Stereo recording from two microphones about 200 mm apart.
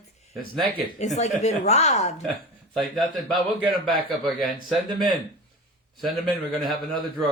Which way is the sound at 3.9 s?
Centre (ahead or behind).